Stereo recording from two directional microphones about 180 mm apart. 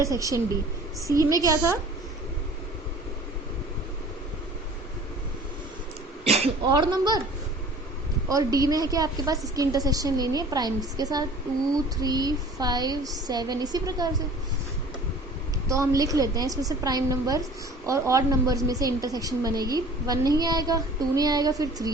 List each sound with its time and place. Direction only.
0.0 s a woman's voice: 15° right (ahead or behind)
6.2 s throat clearing: 35° right (ahead or behind)
6.7 s a woman's voice: 25° right (ahead or behind)
8.3 s a woman's voice: 20° right (ahead or behind)
15.7 s a woman's voice: 15° right (ahead or behind)